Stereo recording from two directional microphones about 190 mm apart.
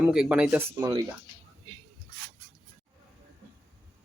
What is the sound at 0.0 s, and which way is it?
Speech, 5° right (ahead or behind).